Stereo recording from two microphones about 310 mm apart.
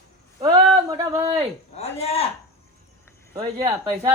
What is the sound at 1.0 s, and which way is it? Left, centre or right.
Speech, centre.